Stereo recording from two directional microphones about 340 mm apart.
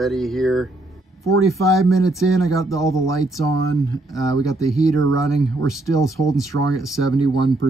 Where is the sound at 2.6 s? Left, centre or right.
Centre.